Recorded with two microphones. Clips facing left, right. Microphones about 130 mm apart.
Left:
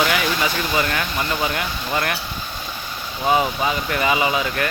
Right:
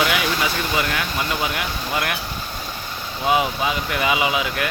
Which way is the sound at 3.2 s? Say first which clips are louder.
Left 1 dB; 5° right (ahead or behind).